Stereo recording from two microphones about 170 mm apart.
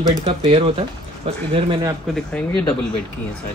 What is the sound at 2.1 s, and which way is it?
Speech, 5° left (ahead or behind).